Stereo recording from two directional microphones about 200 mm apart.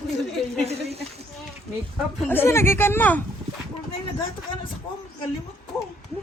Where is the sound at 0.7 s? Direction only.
30° right (ahead or behind).